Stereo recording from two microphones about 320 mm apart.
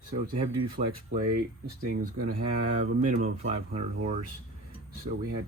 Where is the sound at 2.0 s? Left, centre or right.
Right.